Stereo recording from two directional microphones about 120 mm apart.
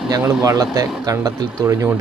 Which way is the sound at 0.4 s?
30° right (ahead or behind).